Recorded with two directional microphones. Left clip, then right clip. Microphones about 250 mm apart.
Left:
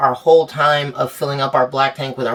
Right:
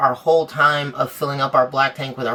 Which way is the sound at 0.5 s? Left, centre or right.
Centre.